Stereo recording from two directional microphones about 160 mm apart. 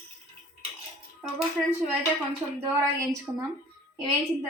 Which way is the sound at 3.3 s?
10° right (ahead or behind).